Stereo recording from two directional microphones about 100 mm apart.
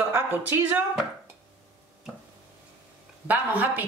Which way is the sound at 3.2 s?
15° right (ahead or behind).